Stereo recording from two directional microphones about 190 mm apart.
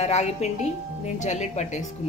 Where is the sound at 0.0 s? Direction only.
35° left (ahead or behind).